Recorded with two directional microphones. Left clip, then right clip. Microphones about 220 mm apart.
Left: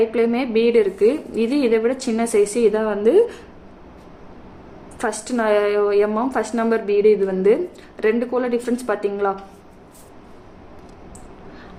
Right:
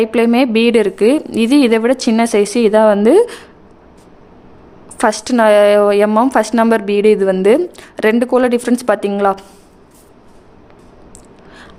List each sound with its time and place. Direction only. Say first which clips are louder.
0.0 s a woman's voice: right 6 dB; 50° right (ahead or behind)
4.9 s a woman's voice: right 10 dB; 55° right (ahead or behind)